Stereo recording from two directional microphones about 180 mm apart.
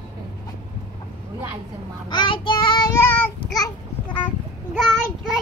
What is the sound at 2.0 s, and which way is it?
Child singing, 25° left (ahead or behind).